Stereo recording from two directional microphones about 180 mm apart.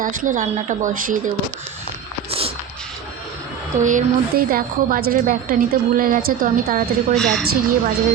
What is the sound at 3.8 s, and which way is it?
Speech, 50° right (ahead or behind).